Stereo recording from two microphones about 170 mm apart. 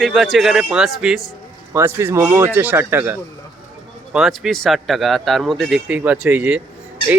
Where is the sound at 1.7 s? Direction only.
15° right (ahead or behind).